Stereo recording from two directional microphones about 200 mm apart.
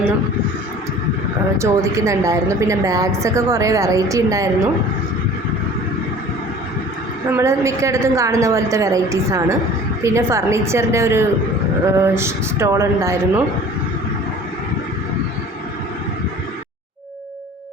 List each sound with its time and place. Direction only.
1.5 s a woman's voice: 15° right (ahead or behind)
7.3 s a woman's voice: 10° right (ahead or behind)